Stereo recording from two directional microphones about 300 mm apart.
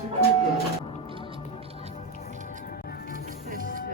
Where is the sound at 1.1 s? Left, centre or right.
Centre.